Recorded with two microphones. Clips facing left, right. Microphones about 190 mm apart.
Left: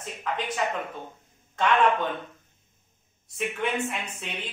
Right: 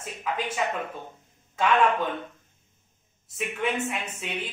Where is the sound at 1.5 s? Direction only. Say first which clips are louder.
Even; 5° right (ahead or behind).